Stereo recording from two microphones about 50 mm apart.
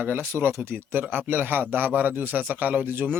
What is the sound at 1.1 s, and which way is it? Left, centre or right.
A man's voice, right.